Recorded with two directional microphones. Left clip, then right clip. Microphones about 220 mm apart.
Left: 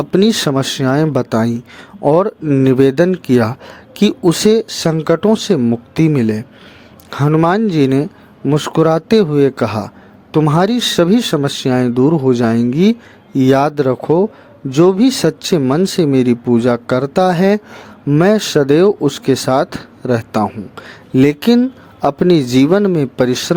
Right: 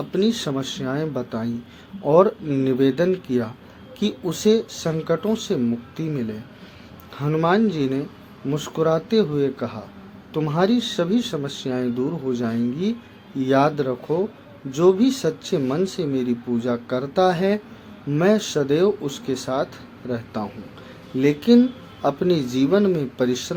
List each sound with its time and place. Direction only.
0.0 s speech: 45° left (ahead or behind)